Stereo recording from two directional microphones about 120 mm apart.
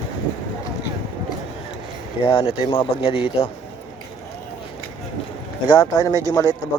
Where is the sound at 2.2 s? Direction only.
50° left (ahead or behind).